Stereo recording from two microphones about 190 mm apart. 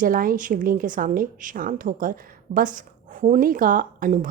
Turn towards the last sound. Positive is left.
turn(degrees=-45)  # may be behind; listen again after turning